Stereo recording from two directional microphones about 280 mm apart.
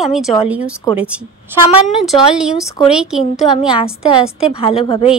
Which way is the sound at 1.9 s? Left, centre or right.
Centre.